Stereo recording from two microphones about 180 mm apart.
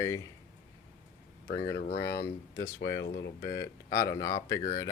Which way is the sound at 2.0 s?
65° left (ahead or behind).